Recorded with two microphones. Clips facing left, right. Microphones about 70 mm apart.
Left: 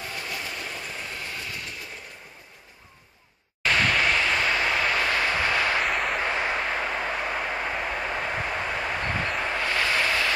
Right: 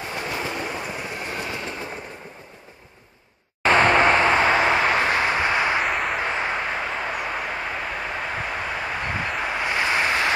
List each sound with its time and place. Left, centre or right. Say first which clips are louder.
0.1 s train: right 9 dB; right
3.6 s vehicle: right 7 dB; right
5.9 s a sound: right 2 dB; centre
6.2 s vehicle: right 1 dB; centre